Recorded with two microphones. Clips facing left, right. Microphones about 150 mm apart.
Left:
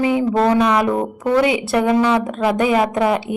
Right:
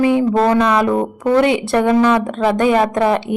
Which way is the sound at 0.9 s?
Centre (ahead or behind).